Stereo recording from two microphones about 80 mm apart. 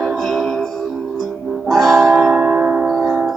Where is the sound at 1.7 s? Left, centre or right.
Centre.